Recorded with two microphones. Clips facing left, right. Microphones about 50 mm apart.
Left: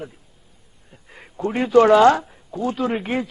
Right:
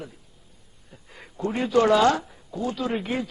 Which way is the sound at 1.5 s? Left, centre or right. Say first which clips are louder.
Left 6 dB; left.